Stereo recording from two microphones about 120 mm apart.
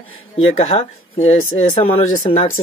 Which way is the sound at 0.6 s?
55° left (ahead or behind).